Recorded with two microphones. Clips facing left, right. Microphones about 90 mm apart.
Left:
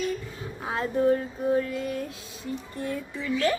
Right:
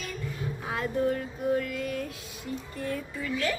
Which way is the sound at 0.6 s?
30° left (ahead or behind).